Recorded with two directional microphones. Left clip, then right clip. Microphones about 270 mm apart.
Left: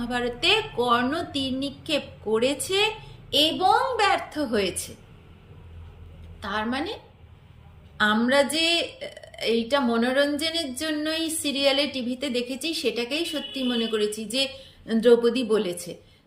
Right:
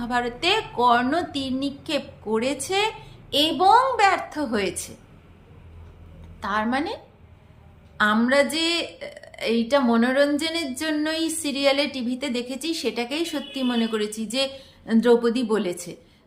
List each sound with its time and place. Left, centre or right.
0.0 s a woman's voice: centre
6.4 s a woman's voice: centre